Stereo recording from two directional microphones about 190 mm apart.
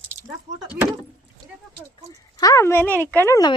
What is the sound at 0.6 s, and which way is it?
Speech, 10° right (ahead or behind).